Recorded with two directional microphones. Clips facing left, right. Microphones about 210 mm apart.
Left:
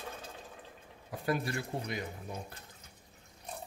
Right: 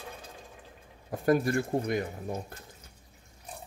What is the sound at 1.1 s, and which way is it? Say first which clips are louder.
A man's voice: right 8 dB; 45° right (ahead or behind).